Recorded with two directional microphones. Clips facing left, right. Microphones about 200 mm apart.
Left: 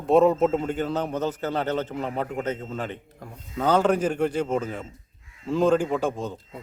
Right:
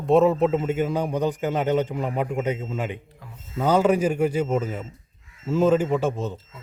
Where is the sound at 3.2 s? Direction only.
45° left (ahead or behind).